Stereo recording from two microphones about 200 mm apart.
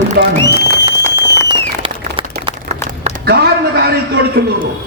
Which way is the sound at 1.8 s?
25° right (ahead or behind).